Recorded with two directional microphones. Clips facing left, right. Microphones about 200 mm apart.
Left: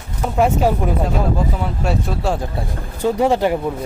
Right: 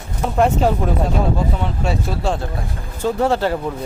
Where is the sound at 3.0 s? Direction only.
15° left (ahead or behind).